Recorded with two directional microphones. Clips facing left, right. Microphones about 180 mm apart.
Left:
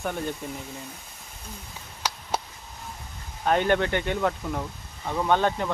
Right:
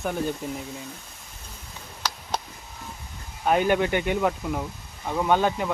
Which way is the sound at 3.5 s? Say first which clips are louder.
Right 1 dB; 10° right (ahead or behind).